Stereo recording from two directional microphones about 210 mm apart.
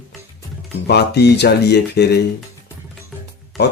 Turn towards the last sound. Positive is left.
turn(degrees=0)  # may be behind; listen again after turning